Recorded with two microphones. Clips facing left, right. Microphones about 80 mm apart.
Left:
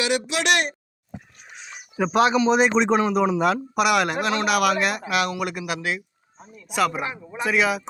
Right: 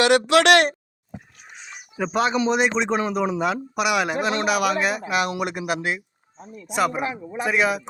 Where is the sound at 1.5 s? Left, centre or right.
Centre.